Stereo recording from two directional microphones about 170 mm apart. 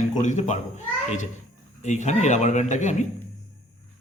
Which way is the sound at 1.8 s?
45° left (ahead or behind).